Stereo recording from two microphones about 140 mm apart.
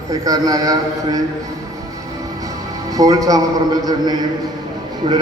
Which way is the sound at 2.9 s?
25° right (ahead or behind).